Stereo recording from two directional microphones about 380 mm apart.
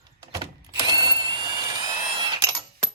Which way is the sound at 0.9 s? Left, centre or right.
Centre.